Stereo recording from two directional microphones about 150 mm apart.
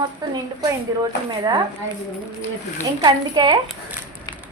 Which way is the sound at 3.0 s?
30° right (ahead or behind).